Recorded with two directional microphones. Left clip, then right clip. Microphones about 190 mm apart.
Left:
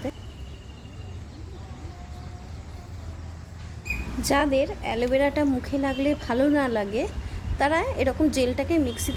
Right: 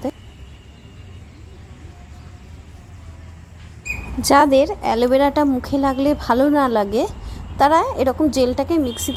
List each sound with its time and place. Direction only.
4.2 s a woman's voice: 30° right (ahead or behind)
5.4 s a woman's voice: 20° right (ahead or behind)